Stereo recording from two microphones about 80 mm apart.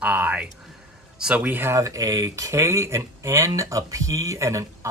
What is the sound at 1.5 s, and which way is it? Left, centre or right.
Speech, right.